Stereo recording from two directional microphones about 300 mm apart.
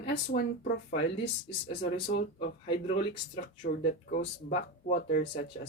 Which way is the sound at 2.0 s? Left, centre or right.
Left.